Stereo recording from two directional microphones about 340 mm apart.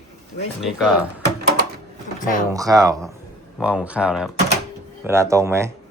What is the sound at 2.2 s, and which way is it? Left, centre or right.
Speech, left.